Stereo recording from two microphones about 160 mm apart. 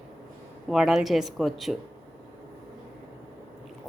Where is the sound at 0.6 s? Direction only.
Centre (ahead or behind).